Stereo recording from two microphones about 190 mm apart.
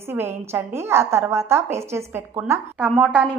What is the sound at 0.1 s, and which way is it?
A woman's voice, 10° right (ahead or behind).